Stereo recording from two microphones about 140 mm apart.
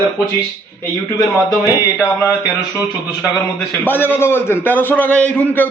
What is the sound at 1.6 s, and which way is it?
Speech, 20° left (ahead or behind).